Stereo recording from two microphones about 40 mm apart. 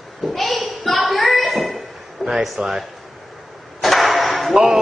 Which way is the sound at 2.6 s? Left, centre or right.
Right.